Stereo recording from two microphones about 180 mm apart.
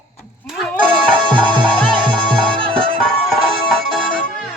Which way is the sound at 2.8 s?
5° left (ahead or behind).